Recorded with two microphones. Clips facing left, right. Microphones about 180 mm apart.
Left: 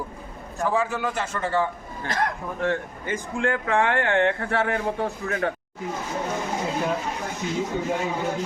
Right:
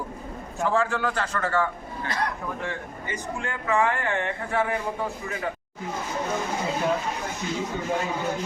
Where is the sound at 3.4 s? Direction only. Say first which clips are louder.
Left 2 dB; 60° left (ahead or behind).